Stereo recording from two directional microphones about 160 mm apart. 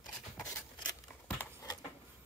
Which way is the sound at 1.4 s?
20° left (ahead or behind).